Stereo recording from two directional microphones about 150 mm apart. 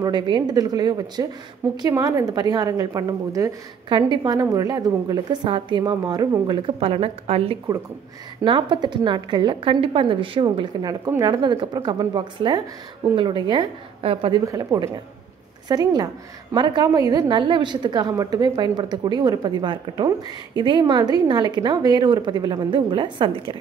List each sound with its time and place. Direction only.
0.0 s a woman's voice: 30° right (ahead or behind)
14.4 s a woman's voice: 20° right (ahead or behind)